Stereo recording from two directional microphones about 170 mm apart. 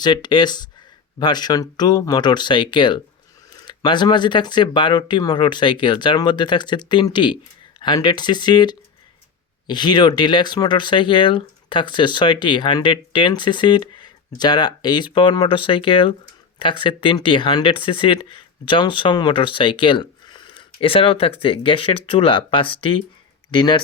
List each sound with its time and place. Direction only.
0.0 s speech: 25° left (ahead or behind)